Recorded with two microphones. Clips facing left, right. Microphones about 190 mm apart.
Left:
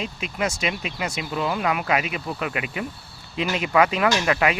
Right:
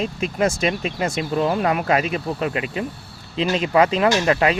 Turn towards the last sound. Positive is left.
turn(degrees=-30)  # may be behind; listen again after turning